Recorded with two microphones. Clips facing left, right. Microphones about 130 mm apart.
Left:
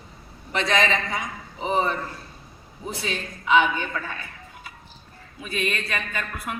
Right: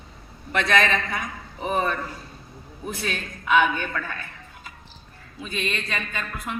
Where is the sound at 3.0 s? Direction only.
55° right (ahead or behind).